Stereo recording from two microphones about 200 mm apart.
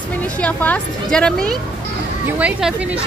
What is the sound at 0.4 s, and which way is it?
A woman's voice, 5° left (ahead or behind).